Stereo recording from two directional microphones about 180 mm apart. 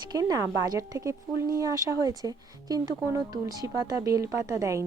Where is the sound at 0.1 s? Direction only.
20° right (ahead or behind).